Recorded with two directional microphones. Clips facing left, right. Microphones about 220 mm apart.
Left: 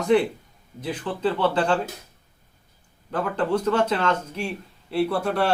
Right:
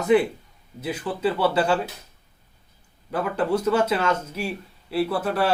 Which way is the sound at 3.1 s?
10° right (ahead or behind).